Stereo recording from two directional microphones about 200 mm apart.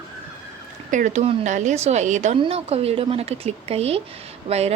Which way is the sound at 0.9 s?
40° right (ahead or behind).